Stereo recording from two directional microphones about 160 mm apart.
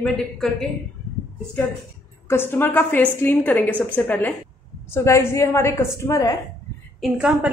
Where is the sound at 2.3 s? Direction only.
15° left (ahead or behind).